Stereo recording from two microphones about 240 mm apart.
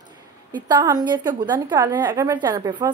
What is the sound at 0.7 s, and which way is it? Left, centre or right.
A woman's voice, centre.